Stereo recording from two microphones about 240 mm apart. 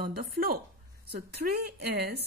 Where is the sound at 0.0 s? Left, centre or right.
Right.